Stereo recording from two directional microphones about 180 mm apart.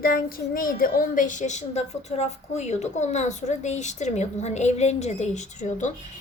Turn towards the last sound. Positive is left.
turn(degrees=40)  # may be behind; listen again after turning